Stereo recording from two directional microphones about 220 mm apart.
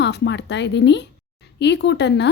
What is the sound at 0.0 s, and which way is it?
A woman's voice, 55° left (ahead or behind).